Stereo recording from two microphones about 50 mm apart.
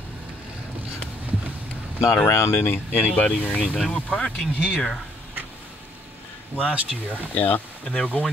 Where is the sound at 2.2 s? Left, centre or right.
Left.